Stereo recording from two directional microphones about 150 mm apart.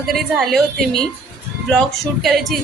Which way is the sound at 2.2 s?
Centre (ahead or behind).